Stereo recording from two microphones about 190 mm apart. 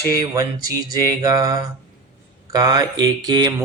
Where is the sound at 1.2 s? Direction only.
20° right (ahead or behind).